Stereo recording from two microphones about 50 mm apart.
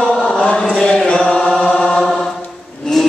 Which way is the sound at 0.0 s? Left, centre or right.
Centre.